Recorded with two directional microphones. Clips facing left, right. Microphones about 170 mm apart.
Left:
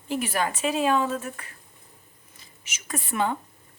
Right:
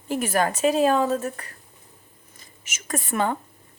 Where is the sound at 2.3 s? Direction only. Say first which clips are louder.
Right 2 dB; 45° right (ahead or behind).